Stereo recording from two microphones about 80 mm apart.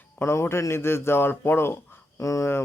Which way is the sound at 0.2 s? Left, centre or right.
Left.